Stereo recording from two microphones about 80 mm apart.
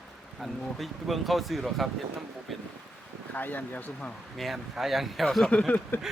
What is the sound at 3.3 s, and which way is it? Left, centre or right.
Speech, left.